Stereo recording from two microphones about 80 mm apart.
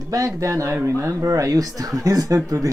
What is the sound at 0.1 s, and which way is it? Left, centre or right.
Speech, right.